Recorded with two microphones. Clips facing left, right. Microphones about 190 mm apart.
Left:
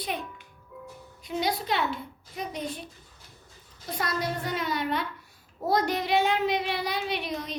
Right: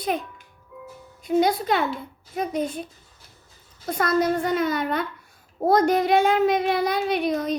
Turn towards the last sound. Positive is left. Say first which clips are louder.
# right 9 dB
turn(degrees=-45)  # may be behind; listen again after turning